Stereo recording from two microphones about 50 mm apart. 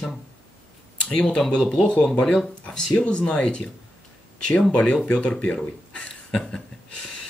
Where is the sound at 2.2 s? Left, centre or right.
Centre.